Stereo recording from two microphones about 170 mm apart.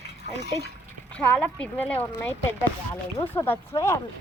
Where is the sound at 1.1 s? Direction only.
10° left (ahead or behind).